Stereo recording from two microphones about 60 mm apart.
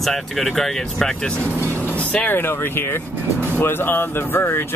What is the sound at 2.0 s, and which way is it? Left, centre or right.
Vehicle, centre.